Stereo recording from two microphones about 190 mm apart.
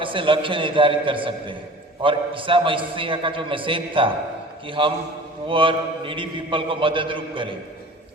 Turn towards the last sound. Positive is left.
turn(degrees=-25)  # may be behind; listen again after turning